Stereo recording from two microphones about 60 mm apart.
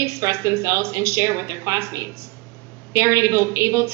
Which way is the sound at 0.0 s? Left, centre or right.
Right.